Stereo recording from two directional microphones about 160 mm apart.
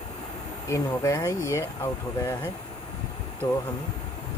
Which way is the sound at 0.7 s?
20° left (ahead or behind).